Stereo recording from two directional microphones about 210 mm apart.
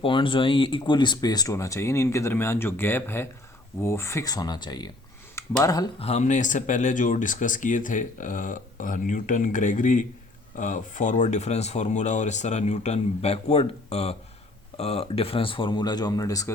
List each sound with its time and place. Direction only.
0.0 s speech: 25° left (ahead or behind)
6.1 s speech: 35° left (ahead or behind); by 16.5 s 15° left (ahead or behind)